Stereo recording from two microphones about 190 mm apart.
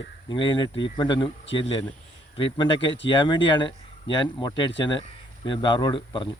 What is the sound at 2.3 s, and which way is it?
Speech, 25° left (ahead or behind).